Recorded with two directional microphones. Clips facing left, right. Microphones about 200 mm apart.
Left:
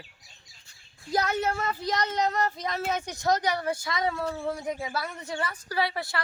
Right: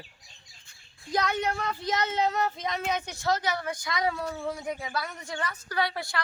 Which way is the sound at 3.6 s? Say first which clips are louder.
Left 4 dB; 30° left (ahead or behind).